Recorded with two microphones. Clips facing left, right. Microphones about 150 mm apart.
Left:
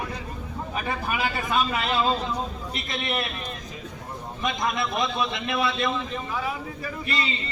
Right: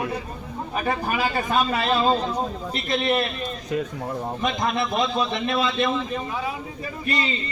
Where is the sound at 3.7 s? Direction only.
70° right (ahead or behind).